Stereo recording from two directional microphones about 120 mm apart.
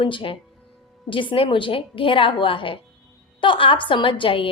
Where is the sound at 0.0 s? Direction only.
45° left (ahead or behind).